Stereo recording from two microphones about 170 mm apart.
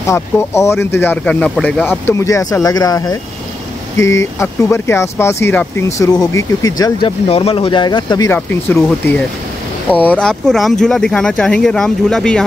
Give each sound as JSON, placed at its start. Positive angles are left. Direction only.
{"t": 0.0, "sound": "speech", "side_deg": 15}
{"t": 7.2, "sound": "speech", "side_deg": 35}
{"t": 8.3, "sound": "speech", "side_deg": 10}